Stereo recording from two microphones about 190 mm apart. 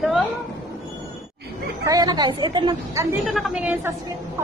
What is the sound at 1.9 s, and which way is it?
A woman's voice, 20° right (ahead or behind).